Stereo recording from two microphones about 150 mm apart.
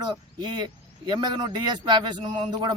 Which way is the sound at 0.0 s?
30° right (ahead or behind).